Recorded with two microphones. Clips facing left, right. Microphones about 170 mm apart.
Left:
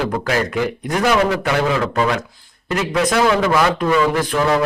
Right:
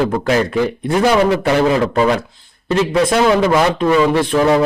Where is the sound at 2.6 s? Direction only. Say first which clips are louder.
Right 4 dB; 25° right (ahead or behind).